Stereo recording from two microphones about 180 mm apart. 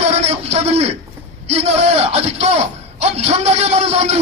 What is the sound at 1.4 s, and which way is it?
A man's voice, 35° right (ahead or behind).